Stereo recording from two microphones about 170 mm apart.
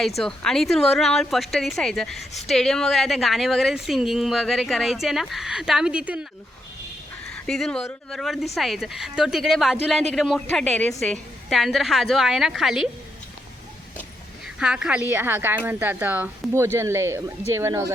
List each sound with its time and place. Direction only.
0.2 s a woman's voice: centre (ahead or behind)
7.3 s a woman's voice: 5° left (ahead or behind)
14.4 s a woman's voice: 5° right (ahead or behind)